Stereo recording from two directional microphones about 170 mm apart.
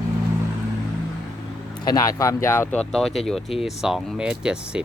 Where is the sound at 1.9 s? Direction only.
20° left (ahead or behind).